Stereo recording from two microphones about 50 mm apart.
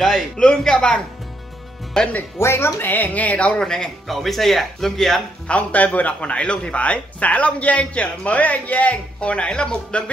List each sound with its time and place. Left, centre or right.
0.4 s a man's voice: centre
2.3 s speech: left
2.8 s speech: left
3.6 s a man's voice: centre
4.1 s speech: centre
5.5 s a man's voice: left